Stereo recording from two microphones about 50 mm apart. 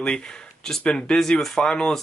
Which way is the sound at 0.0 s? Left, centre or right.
Centre.